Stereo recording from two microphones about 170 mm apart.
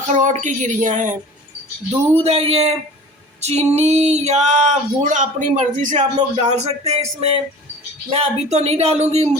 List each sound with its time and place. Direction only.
0.1 s speech: 45° right (ahead or behind)
2.2 s speech: 35° right (ahead or behind)